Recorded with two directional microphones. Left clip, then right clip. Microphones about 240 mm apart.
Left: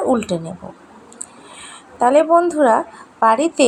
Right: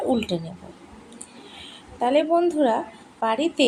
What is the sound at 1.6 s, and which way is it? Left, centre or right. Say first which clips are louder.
A woman's voice: left 9 dB; centre.